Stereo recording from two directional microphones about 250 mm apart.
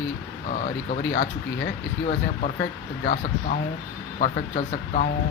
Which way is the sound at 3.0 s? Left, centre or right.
Left.